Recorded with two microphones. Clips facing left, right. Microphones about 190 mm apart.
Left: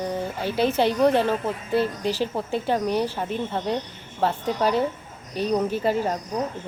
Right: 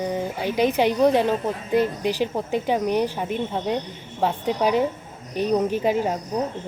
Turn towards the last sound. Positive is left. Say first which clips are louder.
# right 2 dB
turn(degrees=-10)  # may be behind; listen again after turning